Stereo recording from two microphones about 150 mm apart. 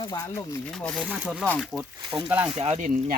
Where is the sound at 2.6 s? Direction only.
45° right (ahead or behind).